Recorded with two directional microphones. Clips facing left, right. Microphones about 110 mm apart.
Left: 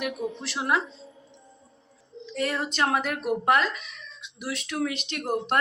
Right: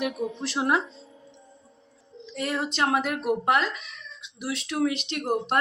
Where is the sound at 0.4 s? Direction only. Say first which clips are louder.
Right 3 dB; 30° right (ahead or behind).